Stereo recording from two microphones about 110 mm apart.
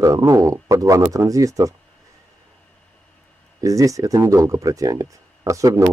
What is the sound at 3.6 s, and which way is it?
Speech, 30° right (ahead or behind).